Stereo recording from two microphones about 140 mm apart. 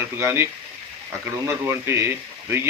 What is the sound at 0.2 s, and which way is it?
Speech, 20° right (ahead or behind).